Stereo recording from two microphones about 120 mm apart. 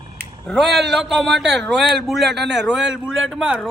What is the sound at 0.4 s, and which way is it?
A man's voice, centre (ahead or behind).